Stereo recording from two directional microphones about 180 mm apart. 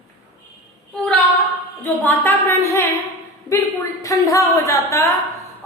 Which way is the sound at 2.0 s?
10° left (ahead or behind).